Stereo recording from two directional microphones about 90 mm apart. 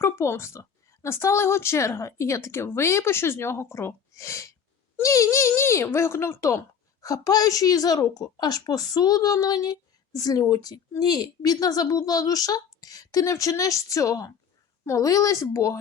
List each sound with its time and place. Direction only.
0.0 s a child's voice: 30° left (ahead or behind)